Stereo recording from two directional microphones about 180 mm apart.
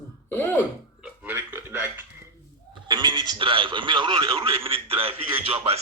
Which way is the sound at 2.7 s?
25° right (ahead or behind).